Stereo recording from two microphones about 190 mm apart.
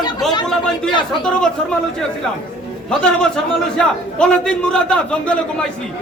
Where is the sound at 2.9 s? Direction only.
5° left (ahead or behind).